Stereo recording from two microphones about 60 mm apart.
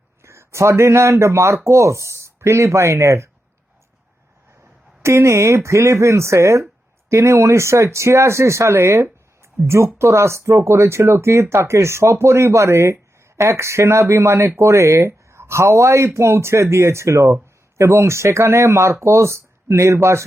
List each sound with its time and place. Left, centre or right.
0.2 s speech: right
4.6 s a sound: right
5.6 s speech: right